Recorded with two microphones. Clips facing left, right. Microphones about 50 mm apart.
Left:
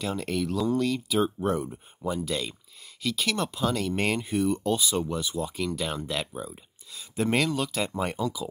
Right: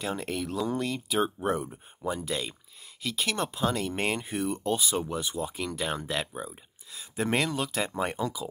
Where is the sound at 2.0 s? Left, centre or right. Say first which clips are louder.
Left 2 dB; right.